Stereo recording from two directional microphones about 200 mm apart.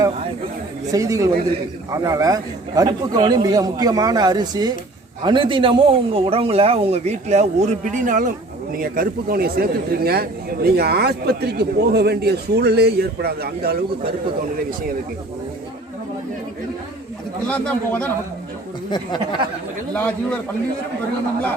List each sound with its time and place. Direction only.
0.9 s a man's voice: 15° right (ahead or behind); by 14.1 s 50° right (ahead or behind)
17.5 s a man's voice: 5° left (ahead or behind)
18.9 s speech: 20° left (ahead or behind)
19.9 s a man's voice: 5° left (ahead or behind)